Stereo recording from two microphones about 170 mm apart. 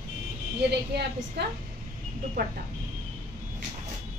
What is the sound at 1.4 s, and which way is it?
Speech, 85° right.